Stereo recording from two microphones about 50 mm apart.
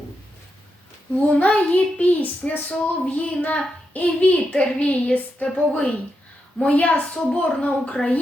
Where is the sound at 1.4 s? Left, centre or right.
Left.